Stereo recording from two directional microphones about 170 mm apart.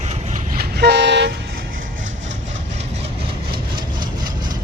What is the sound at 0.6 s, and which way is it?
Train, 75° right (ahead or behind).